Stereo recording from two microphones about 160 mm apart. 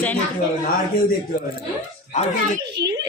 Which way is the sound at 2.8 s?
90° right.